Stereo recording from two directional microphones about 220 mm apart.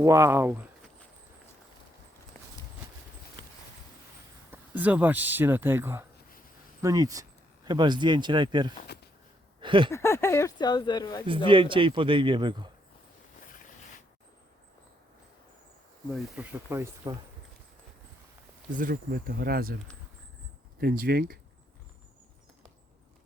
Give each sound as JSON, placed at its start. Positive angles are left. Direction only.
{"t": 0.0, "sound": "speech", "side_deg": -15}
{"t": 4.5, "sound": "speech", "side_deg": -10}
{"t": 9.6, "sound": "a sound", "side_deg": -20}
{"t": 9.9, "sound": "speech", "side_deg": 10}
{"t": 11.4, "sound": "speech", "side_deg": -25}
{"t": 16.1, "sound": "speech", "side_deg": -5}
{"t": 18.7, "sound": "speech", "side_deg": -40}
{"t": 20.8, "sound": "speech", "side_deg": -40}